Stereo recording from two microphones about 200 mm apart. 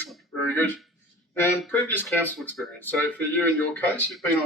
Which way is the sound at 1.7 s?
10° left (ahead or behind).